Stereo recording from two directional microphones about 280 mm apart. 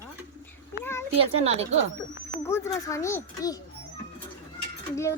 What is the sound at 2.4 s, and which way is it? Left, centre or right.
A child's voice, centre.